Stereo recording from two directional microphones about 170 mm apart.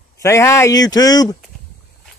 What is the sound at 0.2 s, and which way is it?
Speech, 15° left (ahead or behind).